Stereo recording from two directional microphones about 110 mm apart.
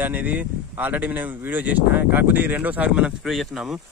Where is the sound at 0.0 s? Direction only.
15° right (ahead or behind).